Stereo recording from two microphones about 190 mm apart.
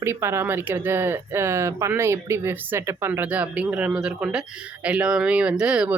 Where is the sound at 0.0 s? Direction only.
15° right (ahead or behind).